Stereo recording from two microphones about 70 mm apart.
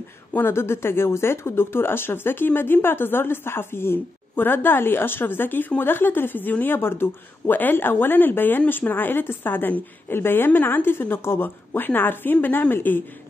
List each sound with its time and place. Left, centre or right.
0.3 s speech: left